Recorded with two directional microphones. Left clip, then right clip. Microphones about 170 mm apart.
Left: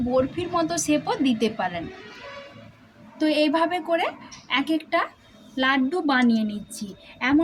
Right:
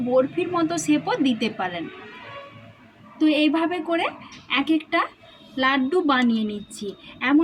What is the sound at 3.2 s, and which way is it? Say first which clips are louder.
A woman's voice: even; 20° left (ahead or behind).